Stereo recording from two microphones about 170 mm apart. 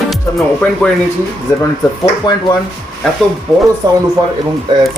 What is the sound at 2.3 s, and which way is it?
Speech, 25° left (ahead or behind).